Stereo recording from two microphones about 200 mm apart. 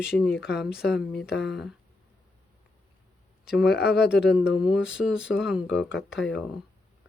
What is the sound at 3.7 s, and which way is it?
Speech, 55° left (ahead or behind).